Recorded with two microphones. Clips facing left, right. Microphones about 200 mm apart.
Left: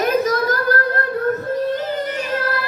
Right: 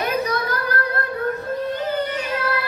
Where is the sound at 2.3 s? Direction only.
40° left (ahead or behind).